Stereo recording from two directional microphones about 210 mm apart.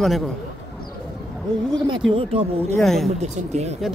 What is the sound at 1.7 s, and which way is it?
Speech, 20° right (ahead or behind).